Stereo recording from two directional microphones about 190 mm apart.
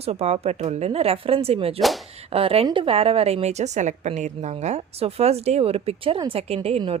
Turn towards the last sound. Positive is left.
turn(degrees=-30)  # may be behind; listen again after turning